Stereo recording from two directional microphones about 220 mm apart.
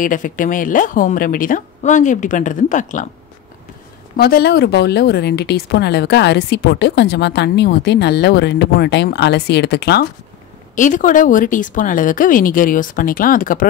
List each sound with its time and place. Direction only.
0.0 s speech: 35° left (ahead or behind)
4.2 s speech: 45° left (ahead or behind)
10.8 s speech: 35° left (ahead or behind)